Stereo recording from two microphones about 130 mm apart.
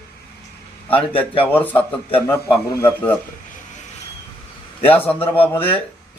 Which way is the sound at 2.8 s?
10° left (ahead or behind).